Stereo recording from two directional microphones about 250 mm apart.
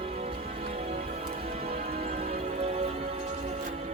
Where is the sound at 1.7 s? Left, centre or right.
Right.